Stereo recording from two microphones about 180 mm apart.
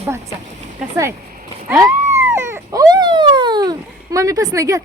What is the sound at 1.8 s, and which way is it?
Speech, 15° right (ahead or behind).